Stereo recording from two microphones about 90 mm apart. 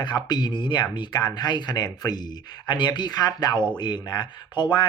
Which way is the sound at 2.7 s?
55° left (ahead or behind).